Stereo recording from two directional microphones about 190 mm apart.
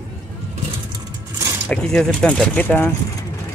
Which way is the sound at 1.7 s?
5° left (ahead or behind).